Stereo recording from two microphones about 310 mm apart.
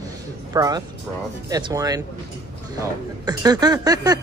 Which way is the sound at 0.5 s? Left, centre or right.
Centre.